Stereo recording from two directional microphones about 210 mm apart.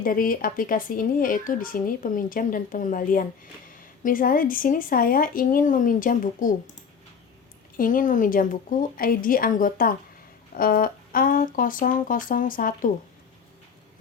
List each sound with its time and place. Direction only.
0.0 s speech: 40° left (ahead or behind)
7.8 s speech: 40° left (ahead or behind)